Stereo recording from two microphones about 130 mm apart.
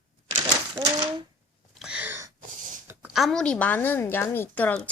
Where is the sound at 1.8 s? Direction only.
10° right (ahead or behind).